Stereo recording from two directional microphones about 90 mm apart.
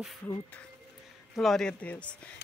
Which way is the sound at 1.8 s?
15° left (ahead or behind).